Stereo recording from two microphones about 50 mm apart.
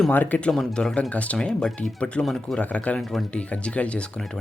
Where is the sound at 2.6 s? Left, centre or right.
Left.